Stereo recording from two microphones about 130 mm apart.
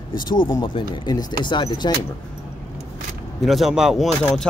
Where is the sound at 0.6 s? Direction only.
40° left (ahead or behind).